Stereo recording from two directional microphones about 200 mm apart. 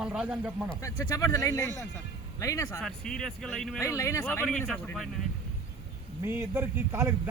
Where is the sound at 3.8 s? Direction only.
15° left (ahead or behind).